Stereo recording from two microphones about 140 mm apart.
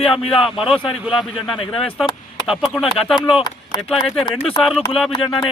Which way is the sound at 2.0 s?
35° left (ahead or behind).